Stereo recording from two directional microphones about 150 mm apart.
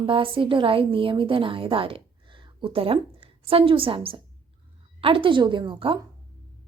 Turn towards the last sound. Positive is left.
turn(degrees=-35)  # may be behind; listen again after turning